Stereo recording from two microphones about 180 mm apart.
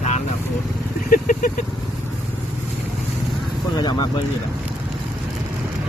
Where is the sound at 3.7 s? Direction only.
25° left (ahead or behind).